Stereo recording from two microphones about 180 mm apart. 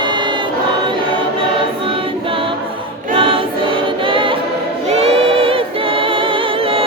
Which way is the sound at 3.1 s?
30° right (ahead or behind).